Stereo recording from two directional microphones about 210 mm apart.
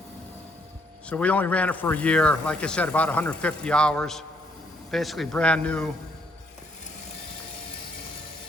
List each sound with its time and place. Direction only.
1.1 s a man's voice: 5° left (ahead or behind)